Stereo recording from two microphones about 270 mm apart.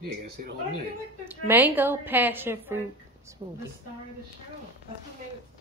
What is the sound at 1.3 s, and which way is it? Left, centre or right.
A woman's voice, centre.